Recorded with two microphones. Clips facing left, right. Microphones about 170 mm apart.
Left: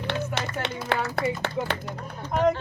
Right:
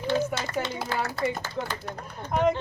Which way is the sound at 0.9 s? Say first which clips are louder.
Left 4 dB; 70° left (ahead or behind).